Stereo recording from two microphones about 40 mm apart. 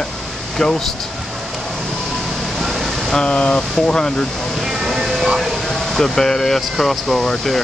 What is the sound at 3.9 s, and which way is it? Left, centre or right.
Speech, centre.